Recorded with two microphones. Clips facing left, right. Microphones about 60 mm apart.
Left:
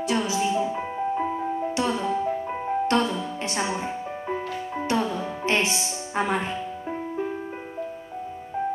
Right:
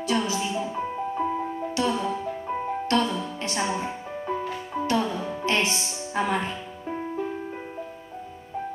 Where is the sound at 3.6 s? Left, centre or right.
Centre.